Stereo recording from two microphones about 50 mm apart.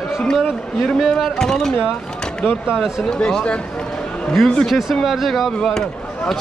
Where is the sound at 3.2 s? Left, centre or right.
Centre.